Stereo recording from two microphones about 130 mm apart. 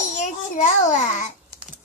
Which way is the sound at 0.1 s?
70° left (ahead or behind).